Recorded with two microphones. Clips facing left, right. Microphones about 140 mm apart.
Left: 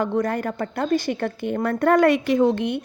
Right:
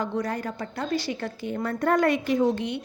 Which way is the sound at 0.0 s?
55° left (ahead or behind).